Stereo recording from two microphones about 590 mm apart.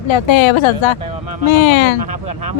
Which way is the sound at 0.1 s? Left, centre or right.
Left.